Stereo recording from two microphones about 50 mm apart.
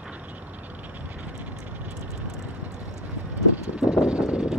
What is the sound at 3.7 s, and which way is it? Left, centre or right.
Vehicle, centre.